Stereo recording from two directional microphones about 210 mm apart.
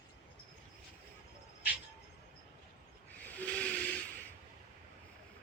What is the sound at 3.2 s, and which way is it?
Steam whistle, 5° left (ahead or behind).